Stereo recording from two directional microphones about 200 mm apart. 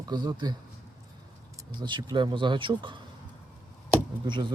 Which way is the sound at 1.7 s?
20° right (ahead or behind).